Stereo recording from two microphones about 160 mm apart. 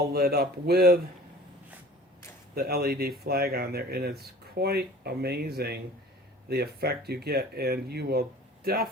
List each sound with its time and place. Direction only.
0.1 s speech: 70° right (ahead or behind)
2.6 s speech: 75° right (ahead or behind)